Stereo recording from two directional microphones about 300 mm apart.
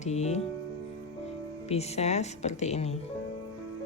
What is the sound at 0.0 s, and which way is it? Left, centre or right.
Speech, left.